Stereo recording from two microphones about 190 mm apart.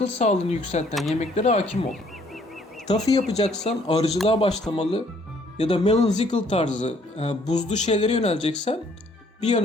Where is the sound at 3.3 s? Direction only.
35° left (ahead or behind).